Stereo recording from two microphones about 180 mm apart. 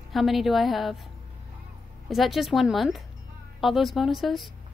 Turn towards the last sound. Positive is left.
turn(degrees=0)  # may be behind; listen again after turning